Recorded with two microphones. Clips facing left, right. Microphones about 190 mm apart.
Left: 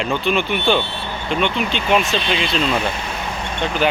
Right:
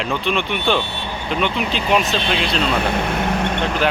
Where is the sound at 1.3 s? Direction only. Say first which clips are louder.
Left 1 dB; centre (ahead or behind).